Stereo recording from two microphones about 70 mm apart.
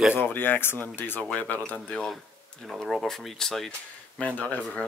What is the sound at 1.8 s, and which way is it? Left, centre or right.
Speech, centre.